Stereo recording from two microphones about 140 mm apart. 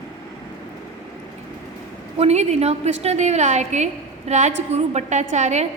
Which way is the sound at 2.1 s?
50° right (ahead or behind).